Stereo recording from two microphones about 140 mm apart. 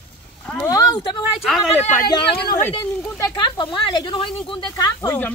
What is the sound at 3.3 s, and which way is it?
Speech, 35° left (ahead or behind).